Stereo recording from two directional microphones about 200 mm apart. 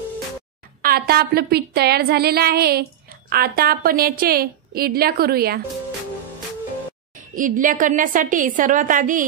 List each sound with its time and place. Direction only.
0.8 s a woman's voice: 50° right (ahead or behind)
7.2 s a woman's voice: 40° right (ahead or behind)